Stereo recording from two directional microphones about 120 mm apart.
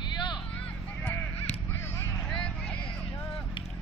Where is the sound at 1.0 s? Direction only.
10° left (ahead or behind).